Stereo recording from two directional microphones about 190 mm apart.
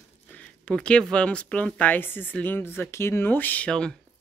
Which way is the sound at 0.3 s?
5° left (ahead or behind).